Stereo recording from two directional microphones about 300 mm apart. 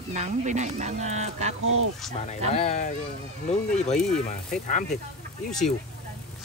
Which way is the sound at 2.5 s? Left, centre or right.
Left.